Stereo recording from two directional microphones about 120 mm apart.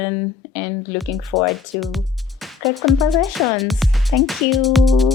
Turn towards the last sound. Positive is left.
turn(degrees=0)  # may be behind; listen again after turning